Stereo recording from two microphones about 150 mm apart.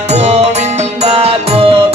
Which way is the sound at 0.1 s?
45° right (ahead or behind).